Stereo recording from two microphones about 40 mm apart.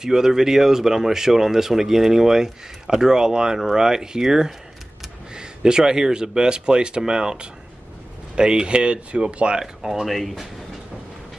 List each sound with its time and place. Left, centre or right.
0.0 s speech: centre
9.6 s speech: centre